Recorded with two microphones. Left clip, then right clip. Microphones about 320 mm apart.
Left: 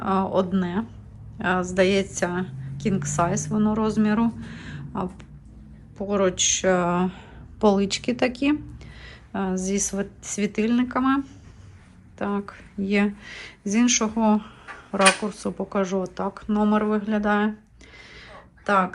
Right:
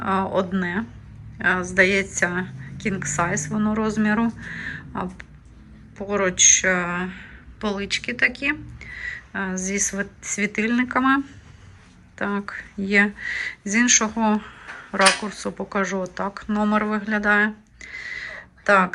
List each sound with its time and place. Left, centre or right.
0.0 s a woman's voice: centre
9.6 s speech: left
9.9 s a woman's voice: centre
12.2 s a woman's voice: centre